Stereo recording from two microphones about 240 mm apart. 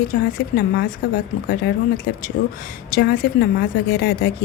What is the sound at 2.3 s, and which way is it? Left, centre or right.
A woman's voice, left.